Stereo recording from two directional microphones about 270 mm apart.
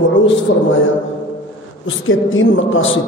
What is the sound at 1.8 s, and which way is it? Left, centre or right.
A man's voice, left.